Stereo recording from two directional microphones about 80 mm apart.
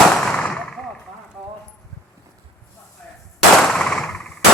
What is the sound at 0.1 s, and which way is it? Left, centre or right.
Gunshot, centre.